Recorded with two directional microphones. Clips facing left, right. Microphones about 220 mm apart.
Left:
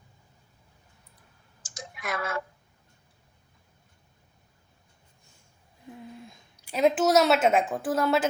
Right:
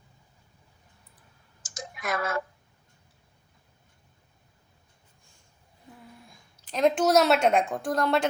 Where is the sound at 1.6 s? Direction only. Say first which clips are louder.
Right 2 dB; 40° right (ahead or behind).